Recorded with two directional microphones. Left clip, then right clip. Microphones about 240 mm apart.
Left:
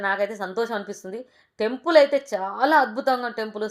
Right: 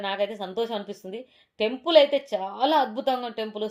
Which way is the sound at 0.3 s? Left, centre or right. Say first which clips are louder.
Left 3 dB; centre.